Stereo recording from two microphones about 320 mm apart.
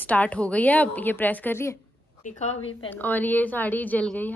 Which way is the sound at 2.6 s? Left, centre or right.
Left.